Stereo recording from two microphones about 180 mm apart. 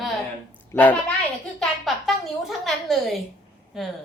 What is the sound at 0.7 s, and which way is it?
Speech, 10° left (ahead or behind).